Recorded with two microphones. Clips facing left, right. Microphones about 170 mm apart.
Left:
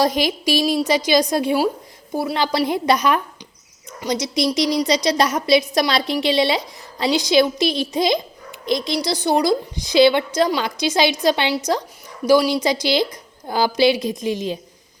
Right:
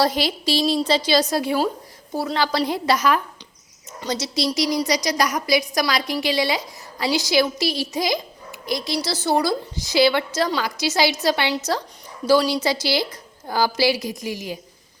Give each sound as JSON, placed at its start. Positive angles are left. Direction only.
{"t": 0.0, "sound": "a woman's voice", "side_deg": 15}